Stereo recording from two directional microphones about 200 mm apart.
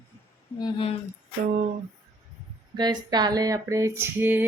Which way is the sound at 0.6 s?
25° left (ahead or behind).